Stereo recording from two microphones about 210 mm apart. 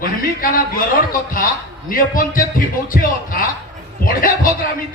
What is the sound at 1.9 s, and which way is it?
Speech, 40° left (ahead or behind).